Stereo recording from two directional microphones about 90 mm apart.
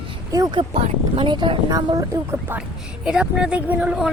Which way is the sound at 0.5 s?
80° right.